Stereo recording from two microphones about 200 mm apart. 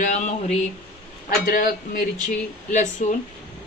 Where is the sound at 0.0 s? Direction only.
40° left (ahead or behind).